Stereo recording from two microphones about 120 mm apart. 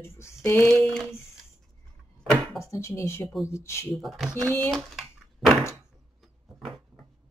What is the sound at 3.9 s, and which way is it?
Speech, centre (ahead or behind).